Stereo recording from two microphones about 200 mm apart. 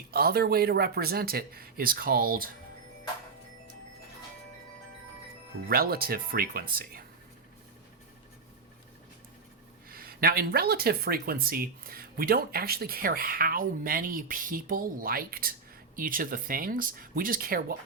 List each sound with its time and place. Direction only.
0.1 s speech: 50° right (ahead or behind)
5.6 s speech: 50° right (ahead or behind)
9.9 s speech: 45° right (ahead or behind)